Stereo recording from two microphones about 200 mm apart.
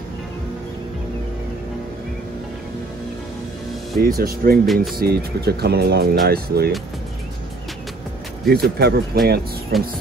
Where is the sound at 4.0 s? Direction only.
50° right (ahead or behind).